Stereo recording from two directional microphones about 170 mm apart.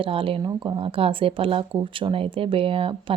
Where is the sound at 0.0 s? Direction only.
30° right (ahead or behind).